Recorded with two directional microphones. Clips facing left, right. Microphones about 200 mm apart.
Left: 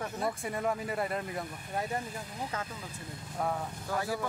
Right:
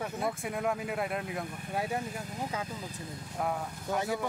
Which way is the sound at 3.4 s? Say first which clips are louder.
Even; 5° right (ahead or behind).